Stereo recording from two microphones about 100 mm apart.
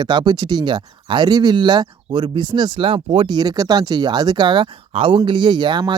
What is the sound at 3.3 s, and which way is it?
Speech, 45° right (ahead or behind).